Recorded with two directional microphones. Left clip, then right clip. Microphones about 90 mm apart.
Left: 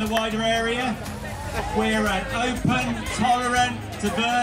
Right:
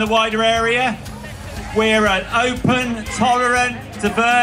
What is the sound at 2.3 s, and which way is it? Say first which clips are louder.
A man's voice: right 7 dB; 30° right (ahead or behind).